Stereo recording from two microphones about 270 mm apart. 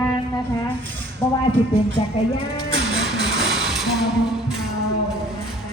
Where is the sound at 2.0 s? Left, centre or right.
Left.